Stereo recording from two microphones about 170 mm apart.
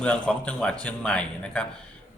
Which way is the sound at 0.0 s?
5° left (ahead or behind).